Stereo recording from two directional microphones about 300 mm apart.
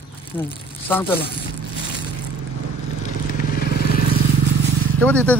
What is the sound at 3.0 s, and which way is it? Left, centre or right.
Vehicle, right.